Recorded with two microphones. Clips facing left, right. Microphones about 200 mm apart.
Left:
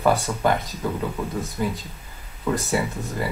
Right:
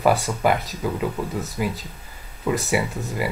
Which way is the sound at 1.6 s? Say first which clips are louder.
Even; 10° right (ahead or behind).